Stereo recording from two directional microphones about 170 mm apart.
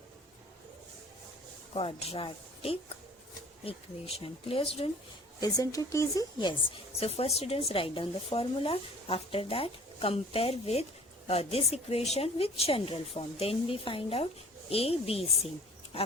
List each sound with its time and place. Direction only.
1.7 s a woman's voice: 35° left (ahead or behind)
5.4 s a woman's voice: 20° left (ahead or behind); by 16.1 s 35° left (ahead or behind)